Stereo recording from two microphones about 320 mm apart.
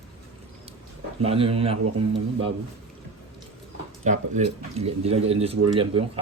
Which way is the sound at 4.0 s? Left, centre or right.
Right.